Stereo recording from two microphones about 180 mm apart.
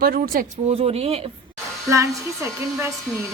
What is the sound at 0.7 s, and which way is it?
Speech, 35° right (ahead or behind).